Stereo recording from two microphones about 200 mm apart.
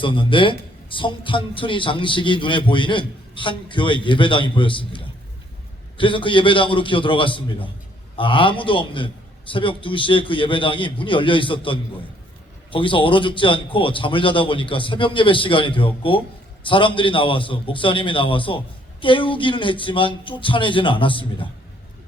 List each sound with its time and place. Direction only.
0.0 s speech: 25° left (ahead or behind)